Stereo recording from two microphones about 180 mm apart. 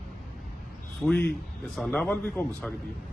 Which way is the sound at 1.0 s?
10° left (ahead or behind).